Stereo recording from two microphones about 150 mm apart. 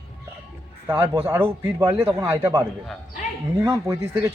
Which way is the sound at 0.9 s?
15° right (ahead or behind).